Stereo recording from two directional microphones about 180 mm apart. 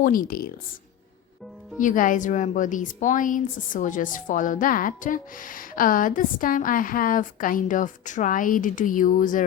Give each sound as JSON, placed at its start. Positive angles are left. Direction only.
{"t": 0.0, "sound": "a woman's voice", "side_deg": 50}
{"t": 1.8, "sound": "a woman's voice", "side_deg": 45}